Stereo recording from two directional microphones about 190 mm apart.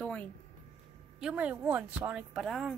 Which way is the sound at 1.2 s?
5° right (ahead or behind).